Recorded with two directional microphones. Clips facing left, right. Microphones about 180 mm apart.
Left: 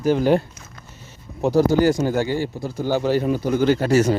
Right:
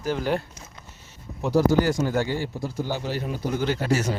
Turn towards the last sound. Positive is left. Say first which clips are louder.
# left 7 dB
turn(degrees=50)  # may be behind; listen again after turning